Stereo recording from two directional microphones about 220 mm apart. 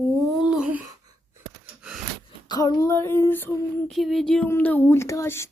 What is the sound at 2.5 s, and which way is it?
Female singing, 15° left (ahead or behind).